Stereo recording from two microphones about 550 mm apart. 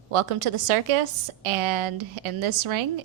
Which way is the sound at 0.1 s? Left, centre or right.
Right.